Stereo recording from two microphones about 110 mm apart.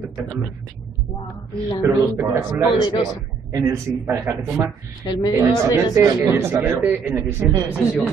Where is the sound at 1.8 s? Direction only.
25° right (ahead or behind).